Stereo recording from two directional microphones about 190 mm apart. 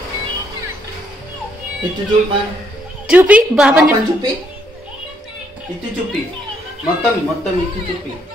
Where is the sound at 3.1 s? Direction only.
5° right (ahead or behind).